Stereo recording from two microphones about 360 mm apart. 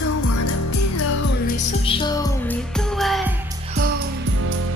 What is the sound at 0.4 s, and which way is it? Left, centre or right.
Music, left.